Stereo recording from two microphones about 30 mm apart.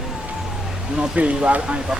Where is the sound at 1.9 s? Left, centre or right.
Centre.